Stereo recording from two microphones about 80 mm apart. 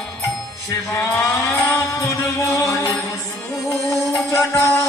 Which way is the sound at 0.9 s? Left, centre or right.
Left.